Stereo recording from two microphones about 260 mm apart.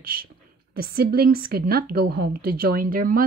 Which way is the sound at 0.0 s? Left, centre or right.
Right.